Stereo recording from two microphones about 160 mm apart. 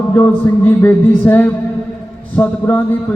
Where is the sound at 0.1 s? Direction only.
10° left (ahead or behind).